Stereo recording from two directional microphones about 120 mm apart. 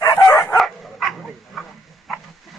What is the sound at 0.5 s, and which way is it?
Dog, centre (ahead or behind).